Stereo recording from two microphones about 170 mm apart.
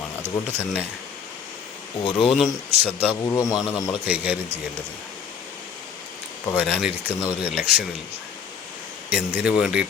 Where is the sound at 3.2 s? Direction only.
20° left (ahead or behind).